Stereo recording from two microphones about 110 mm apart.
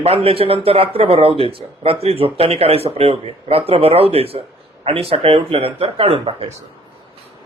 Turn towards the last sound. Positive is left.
turn(degrees=-65)  # may be behind; listen again after turning